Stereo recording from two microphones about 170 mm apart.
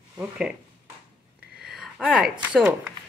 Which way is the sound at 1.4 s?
65° right (ahead or behind).